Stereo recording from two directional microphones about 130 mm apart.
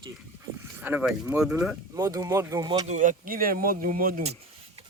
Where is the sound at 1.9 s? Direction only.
30° right (ahead or behind).